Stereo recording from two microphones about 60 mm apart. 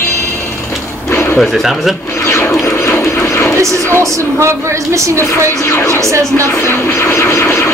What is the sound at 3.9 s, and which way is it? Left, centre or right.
A woman's voice, right.